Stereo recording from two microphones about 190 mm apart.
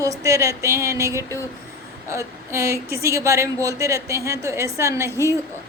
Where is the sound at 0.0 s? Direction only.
15° right (ahead or behind).